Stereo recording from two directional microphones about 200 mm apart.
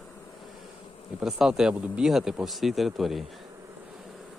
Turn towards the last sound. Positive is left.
turn(degrees=0)  # may be behind; listen again after turning